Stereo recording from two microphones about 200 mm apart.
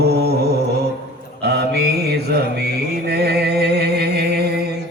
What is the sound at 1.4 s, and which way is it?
Mantra, 55° right (ahead or behind).